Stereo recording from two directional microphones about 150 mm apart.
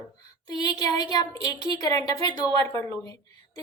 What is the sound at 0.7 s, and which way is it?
A woman's voice, 25° left (ahead or behind).